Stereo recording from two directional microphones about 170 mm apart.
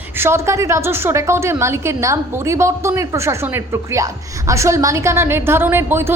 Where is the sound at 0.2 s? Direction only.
15° right (ahead or behind).